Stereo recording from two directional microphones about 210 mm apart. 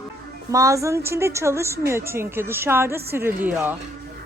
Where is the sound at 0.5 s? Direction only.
15° right (ahead or behind).